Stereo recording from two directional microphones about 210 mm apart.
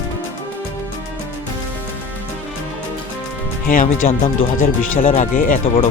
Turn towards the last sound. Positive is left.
turn(degrees=35)  # may be behind; listen again after turning